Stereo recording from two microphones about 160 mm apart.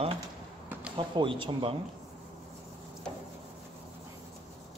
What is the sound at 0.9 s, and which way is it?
Speech, 30° right (ahead or behind).